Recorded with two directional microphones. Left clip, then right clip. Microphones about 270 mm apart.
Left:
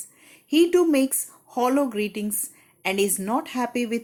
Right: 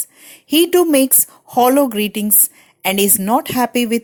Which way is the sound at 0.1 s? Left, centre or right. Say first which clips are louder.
Right 6 dB; right.